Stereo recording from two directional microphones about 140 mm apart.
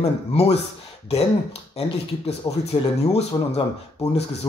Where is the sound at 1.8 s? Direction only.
45° left (ahead or behind).